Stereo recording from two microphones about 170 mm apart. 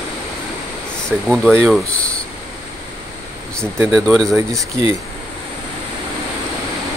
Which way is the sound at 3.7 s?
15° right (ahead or behind).